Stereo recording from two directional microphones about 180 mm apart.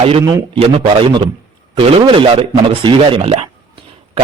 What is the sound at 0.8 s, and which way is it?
A man's voice, 30° right (ahead or behind).